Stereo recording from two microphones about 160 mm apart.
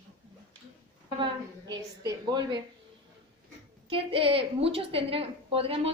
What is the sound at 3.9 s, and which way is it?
A woman's voice, 35° right (ahead or behind).